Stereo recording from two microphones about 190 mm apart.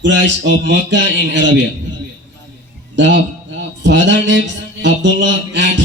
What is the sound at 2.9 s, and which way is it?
A man's voice, 70° right (ahead or behind).